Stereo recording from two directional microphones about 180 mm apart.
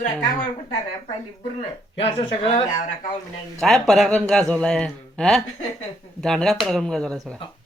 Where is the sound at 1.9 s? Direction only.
30° left (ahead or behind).